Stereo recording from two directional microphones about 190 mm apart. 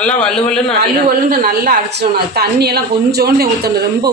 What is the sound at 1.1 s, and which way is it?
Speech, 50° right (ahead or behind).